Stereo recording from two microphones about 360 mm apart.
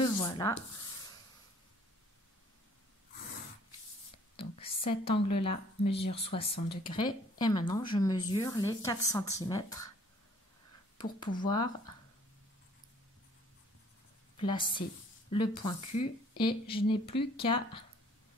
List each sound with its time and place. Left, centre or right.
0.0 s rub: centre
4.4 s a woman's voice: centre
11.0 s speech: centre
14.3 s speech: centre